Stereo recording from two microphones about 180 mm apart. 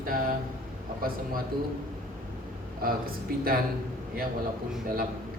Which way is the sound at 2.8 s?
55° right (ahead or behind).